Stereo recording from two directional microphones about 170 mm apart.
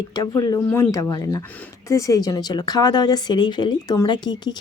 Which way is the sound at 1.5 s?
10° left (ahead or behind).